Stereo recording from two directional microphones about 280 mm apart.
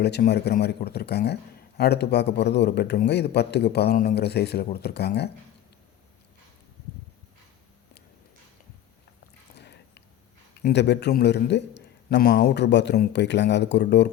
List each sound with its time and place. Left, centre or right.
0.0 s a man's voice: left
9.6 s a sound: left
10.6 s a man's voice: left